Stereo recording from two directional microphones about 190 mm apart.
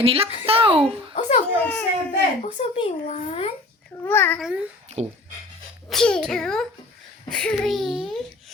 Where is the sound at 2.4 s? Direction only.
35° left (ahead or behind).